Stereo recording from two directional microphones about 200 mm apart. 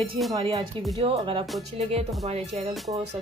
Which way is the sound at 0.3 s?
25° right (ahead or behind).